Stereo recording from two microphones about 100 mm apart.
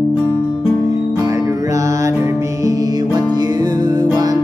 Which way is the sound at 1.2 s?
30° right (ahead or behind).